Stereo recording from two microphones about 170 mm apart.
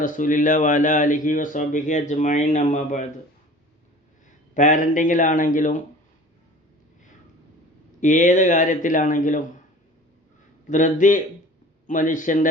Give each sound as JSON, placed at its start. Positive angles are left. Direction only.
{"t": 0.0, "sound": "speech", "side_deg": 50}
{"t": 4.5, "sound": "speech", "side_deg": 50}
{"t": 8.0, "sound": "speech", "side_deg": 45}
{"t": 10.7, "sound": "speech", "side_deg": 50}